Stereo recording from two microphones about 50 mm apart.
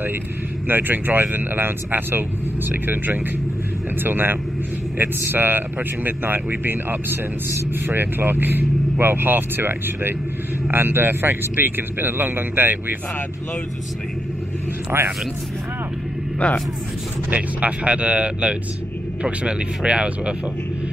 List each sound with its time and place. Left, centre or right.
0.7 s speech: right
14.9 s speech: right
16.4 s speech: centre
17.3 s speech: right